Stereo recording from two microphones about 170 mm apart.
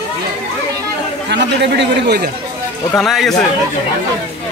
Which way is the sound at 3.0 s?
Centre (ahead or behind).